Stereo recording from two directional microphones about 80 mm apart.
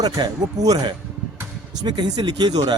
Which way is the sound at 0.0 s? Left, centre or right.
Right.